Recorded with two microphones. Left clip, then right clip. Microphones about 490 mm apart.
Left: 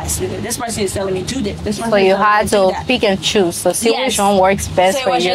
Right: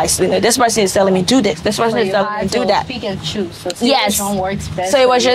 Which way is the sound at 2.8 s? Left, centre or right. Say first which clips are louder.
Left 8 dB; left.